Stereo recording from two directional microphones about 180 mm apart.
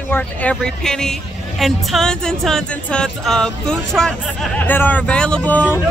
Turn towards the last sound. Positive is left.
turn(degrees=5)  # may be behind; listen again after turning